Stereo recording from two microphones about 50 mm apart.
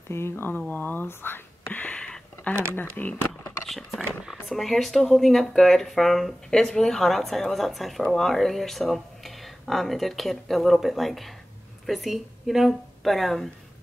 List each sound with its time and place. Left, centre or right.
0.1 s speech: left
0.5 s speech: left
1.7 s a sound: left
2.0 s a sound: centre
2.5 s speech: left
3.6 s speech: centre